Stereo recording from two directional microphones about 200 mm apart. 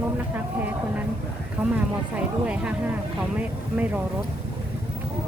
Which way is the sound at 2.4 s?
5° right (ahead or behind).